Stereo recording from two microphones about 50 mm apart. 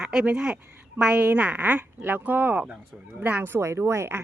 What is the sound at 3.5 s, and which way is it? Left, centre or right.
Speech, right.